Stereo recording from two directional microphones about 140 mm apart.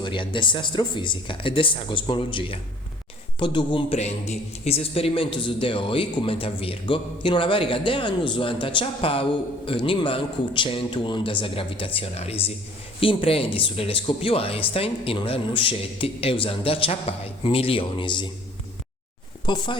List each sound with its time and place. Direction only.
0.0 s a man's voice: 35° left (ahead or behind)
3.9 s a man's voice: 50° left (ahead or behind); by 18.3 s 35° left (ahead or behind)
19.5 s a man's voice: 35° left (ahead or behind)